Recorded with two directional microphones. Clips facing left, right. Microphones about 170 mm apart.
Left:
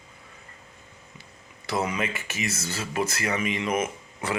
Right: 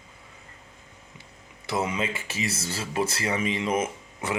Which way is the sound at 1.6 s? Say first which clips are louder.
Even; 25° right (ahead or behind).